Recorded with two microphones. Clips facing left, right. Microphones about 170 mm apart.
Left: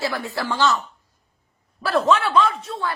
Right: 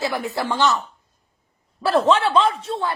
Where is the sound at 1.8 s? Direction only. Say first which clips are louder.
Right 2 dB; 30° right (ahead or behind).